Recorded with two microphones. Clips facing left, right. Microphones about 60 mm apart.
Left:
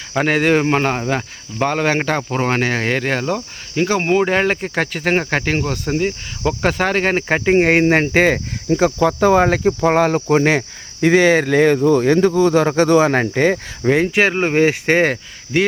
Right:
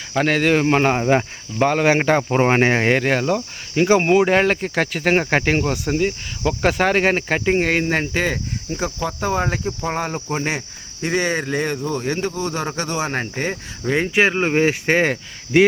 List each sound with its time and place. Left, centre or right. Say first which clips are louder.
0.1 s speech: left 2 dB; centre
3.0 s speech: right 1 dB; centre
7.3 s speech: left 4 dB; centre
7.6 s speech: left 6 dB; left
8.7 s speech: left 10 dB; left
10.2 s cricket: left 9 dB; left
11.0 s speech: left 8 dB; left
13.8 s speech: left 5 dB; left
14.2 s speech: left 1 dB; centre
14.4 s speech: left 3 dB; left
15.0 s speech: left 3 dB; centre